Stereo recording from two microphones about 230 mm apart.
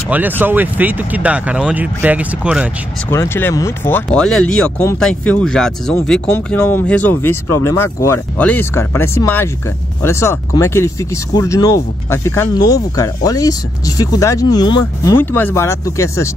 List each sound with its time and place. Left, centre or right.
0.4 s speech: centre
3.1 s speech: centre